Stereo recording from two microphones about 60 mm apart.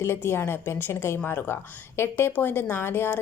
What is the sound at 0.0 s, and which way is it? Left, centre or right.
A woman's voice, left.